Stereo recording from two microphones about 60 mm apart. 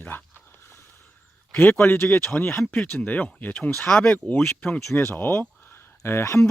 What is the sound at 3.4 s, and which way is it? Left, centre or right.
Speech, left.